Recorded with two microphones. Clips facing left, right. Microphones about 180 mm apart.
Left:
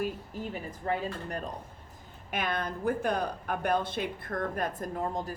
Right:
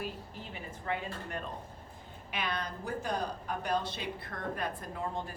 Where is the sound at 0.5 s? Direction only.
40° left (ahead or behind).